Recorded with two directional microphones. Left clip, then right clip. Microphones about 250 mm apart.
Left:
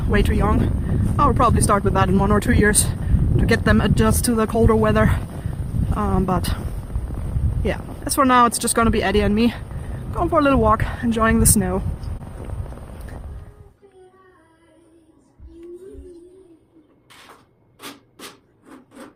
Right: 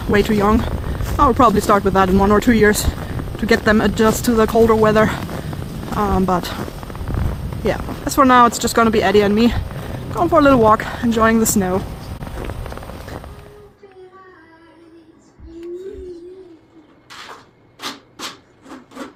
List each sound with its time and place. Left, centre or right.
0.1 s speech: left
7.1 s a sound: right
7.6 s speech: centre
12.7 s vehicle: right